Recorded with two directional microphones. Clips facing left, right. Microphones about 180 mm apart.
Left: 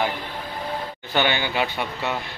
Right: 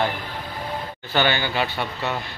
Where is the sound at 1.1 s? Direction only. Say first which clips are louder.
Right 1 dB; 15° left (ahead or behind).